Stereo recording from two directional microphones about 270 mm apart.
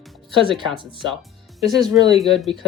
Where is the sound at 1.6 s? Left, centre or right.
Centre.